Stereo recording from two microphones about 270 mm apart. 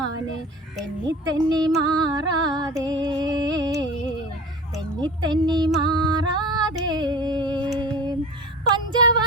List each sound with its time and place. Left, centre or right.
1.0 s speech: centre
1.8 s music: centre
7.8 s female singing: centre
8.7 s a sound: centre